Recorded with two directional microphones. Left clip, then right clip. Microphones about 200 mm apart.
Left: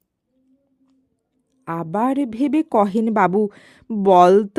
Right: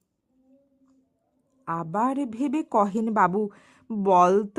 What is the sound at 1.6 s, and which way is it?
A woman's voice, 40° left (ahead or behind).